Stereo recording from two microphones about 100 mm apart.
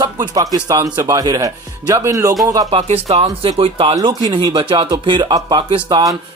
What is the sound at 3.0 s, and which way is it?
Speech, 90° right.